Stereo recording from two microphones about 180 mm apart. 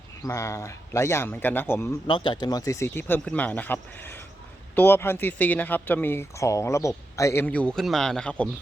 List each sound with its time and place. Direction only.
0.2 s speech: 15° left (ahead or behind)
2.0 s speech: 25° left (ahead or behind); by 8.4 s 5° left (ahead or behind)